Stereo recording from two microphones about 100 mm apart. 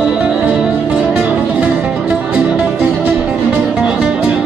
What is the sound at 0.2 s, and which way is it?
Music, 10° right (ahead or behind).